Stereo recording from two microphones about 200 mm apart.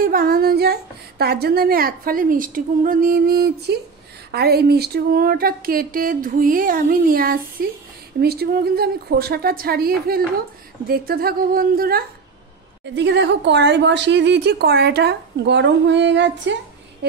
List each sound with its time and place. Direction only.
0.0 s a woman's voice: 45° right (ahead or behind)
12.9 s a woman's voice: 60° right (ahead or behind)